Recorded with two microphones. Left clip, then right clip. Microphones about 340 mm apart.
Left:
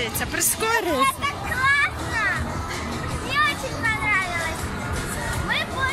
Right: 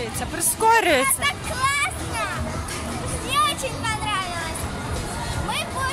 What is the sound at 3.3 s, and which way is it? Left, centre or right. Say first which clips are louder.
Vehicle: right 1 dB; centre.